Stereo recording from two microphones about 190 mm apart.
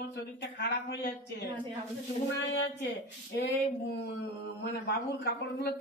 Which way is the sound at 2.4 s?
75° left (ahead or behind).